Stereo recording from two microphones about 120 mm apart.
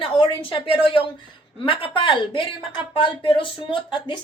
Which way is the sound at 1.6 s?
45° left (ahead or behind).